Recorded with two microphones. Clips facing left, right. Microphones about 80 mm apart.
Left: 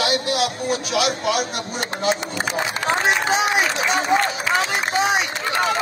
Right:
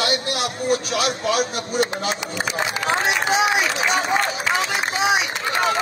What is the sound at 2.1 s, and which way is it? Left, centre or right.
Speech, left.